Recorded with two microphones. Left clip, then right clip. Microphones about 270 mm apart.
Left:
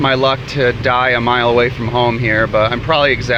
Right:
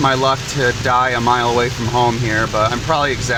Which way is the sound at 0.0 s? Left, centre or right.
Centre.